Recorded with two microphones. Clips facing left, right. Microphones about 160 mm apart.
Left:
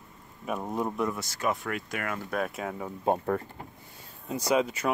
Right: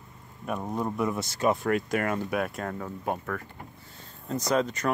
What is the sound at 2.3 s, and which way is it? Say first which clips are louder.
Speech: right 1 dB; centre (ahead or behind).